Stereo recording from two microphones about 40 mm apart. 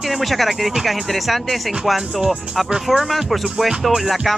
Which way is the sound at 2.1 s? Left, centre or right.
Right.